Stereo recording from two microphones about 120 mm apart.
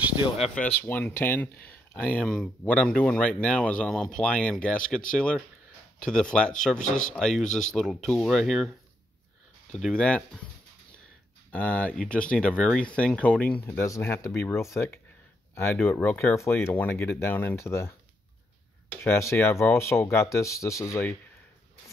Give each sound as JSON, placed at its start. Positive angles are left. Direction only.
{"t": 0.8, "sound": "speech", "side_deg": 15}
{"t": 9.7, "sound": "speech", "side_deg": 5}
{"t": 11.5, "sound": "speech", "side_deg": 10}
{"t": 13.7, "sound": "speech", "side_deg": 25}